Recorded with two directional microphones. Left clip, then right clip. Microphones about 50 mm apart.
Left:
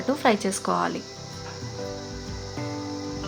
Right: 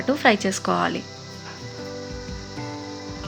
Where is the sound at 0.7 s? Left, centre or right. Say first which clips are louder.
Right 2 dB; right.